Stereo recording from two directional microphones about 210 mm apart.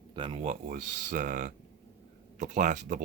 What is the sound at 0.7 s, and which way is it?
Speech, 40° right (ahead or behind).